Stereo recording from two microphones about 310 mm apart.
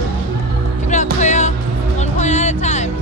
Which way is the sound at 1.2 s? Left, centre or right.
Left.